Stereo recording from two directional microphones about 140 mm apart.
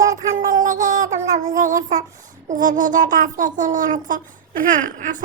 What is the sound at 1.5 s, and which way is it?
Child singing, 70° right (ahead or behind).